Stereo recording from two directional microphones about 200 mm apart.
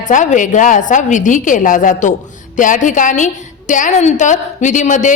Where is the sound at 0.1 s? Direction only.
40° left (ahead or behind).